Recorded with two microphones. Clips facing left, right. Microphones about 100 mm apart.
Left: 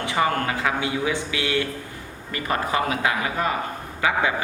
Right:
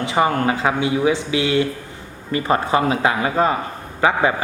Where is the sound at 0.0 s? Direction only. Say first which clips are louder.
Right 5 dB; 20° right (ahead or behind).